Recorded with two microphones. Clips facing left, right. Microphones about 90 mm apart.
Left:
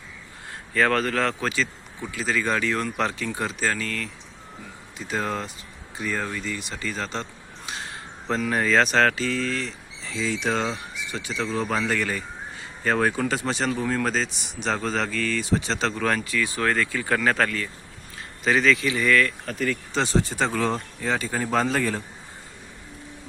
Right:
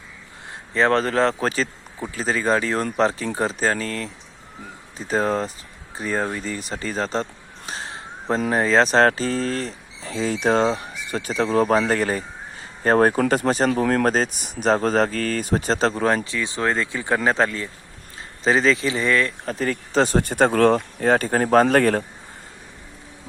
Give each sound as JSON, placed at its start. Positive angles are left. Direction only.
{"t": 0.7, "sound": "speech", "side_deg": -25}
{"t": 13.8, "sound": "speech", "side_deg": -65}
{"t": 14.1, "sound": "speech", "side_deg": -45}